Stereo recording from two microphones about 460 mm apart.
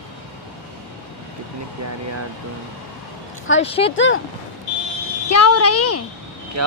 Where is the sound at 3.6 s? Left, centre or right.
Centre.